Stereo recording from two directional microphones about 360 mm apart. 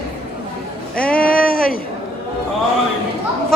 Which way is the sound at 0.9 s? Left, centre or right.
Centre.